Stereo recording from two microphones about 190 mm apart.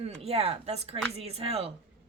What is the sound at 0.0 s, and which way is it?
A woman's voice, 30° right (ahead or behind).